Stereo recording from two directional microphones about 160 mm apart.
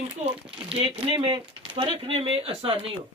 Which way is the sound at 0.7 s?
35° right (ahead or behind).